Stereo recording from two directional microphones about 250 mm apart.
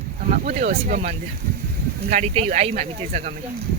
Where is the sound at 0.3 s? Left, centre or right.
Right.